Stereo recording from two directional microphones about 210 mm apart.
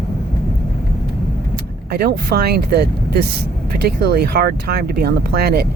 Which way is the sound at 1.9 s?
50° right (ahead or behind).